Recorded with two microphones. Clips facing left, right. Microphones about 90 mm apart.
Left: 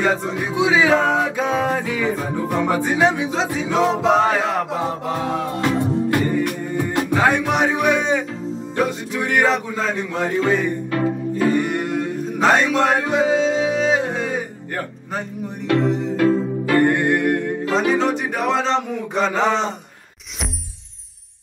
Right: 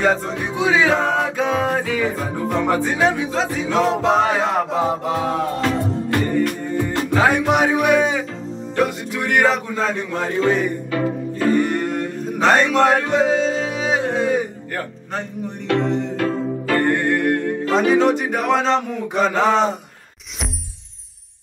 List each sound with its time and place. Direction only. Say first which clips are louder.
0.0 s speech: right 1 dB; 5° left (ahead or behind)
0.7 s music: left 1 dB; 5° left (ahead or behind)
2.9 s music: left 1 dB; 15° left (ahead or behind)
3.7 s speech: even; 5° left (ahead or behind)
5.1 s music: right 2 dB; centre (ahead or behind)
5.6 s music: left 1 dB; 15° left (ahead or behind)
7.2 s music: right 2 dB; centre (ahead or behind)
8.8 s speech: even; centre (ahead or behind)
10.9 s music: left 1 dB; 5° left (ahead or behind)
13.7 s music: left 1 dB; 5° right (ahead or behind)
15.7 s music: left 1 dB; 5° left (ahead or behind)
17.6 s speech: right 3 dB; centre (ahead or behind)